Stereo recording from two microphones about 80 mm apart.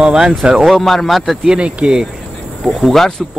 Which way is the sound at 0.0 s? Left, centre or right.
Centre.